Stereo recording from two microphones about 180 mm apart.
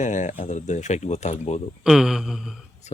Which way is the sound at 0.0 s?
45° left (ahead or behind).